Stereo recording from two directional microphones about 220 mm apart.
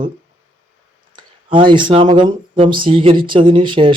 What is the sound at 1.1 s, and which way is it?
Speech, 20° right (ahead or behind).